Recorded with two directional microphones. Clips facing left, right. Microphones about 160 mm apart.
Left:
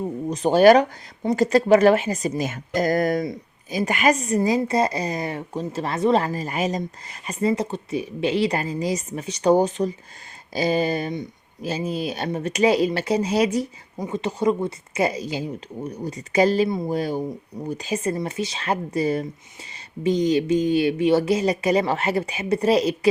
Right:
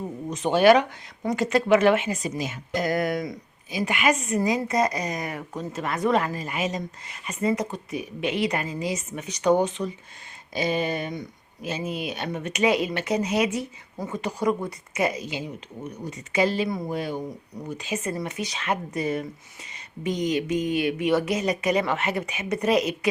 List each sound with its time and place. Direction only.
0.3 s speech: 40° left (ahead or behind)
11.1 s speech: 25° left (ahead or behind)
11.7 s speech: 35° left (ahead or behind)
14.0 s speech: 25° left (ahead or behind); by 16.6 s 40° left (ahead or behind)
16.6 s speech: 25° left (ahead or behind)
16.9 s speech: 40° left (ahead or behind)